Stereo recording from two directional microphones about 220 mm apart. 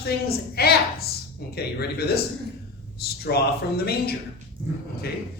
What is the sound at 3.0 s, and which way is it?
Speech, 45° left (ahead or behind).